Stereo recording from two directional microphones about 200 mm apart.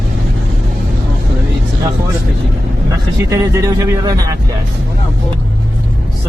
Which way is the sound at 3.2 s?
15° right (ahead or behind).